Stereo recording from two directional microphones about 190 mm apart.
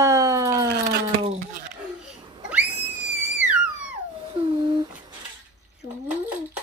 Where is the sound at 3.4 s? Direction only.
5° right (ahead or behind).